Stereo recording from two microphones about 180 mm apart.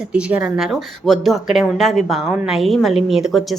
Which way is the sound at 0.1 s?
5° right (ahead or behind).